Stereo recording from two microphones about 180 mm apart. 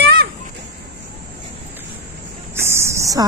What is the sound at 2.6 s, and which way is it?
Cricket, 15° right (ahead or behind).